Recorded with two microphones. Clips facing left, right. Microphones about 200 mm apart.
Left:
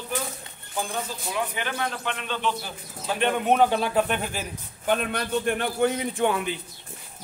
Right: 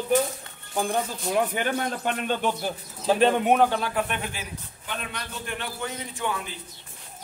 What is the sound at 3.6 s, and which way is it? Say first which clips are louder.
Speech: left 2 dB; 20° left (ahead or behind).